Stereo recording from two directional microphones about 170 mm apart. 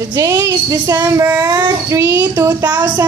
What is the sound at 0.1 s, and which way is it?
A child's voice, 20° right (ahead or behind).